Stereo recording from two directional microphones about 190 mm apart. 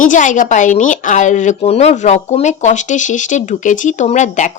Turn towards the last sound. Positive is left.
turn(degrees=40)  # may be behind; listen again after turning